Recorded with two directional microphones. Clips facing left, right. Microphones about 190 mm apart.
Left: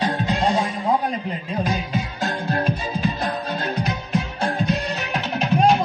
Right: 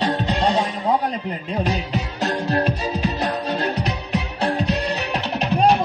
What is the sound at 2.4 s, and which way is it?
Music, 40° right (ahead or behind).